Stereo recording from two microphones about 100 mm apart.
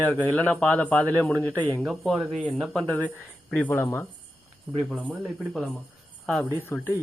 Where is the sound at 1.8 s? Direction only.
Centre (ahead or behind).